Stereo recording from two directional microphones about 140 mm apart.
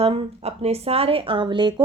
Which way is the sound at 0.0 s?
45° right (ahead or behind).